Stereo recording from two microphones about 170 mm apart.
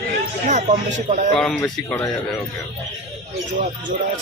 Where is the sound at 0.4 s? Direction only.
45° right (ahead or behind).